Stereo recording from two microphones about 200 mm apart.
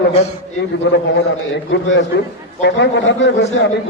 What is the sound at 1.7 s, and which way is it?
A man's voice, 65° left (ahead or behind).